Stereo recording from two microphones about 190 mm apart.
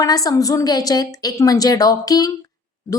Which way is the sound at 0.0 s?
20° left (ahead or behind).